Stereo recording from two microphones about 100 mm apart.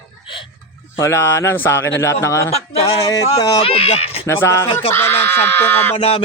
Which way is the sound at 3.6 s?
80° left.